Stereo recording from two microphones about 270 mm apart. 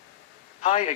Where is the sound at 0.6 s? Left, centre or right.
Left.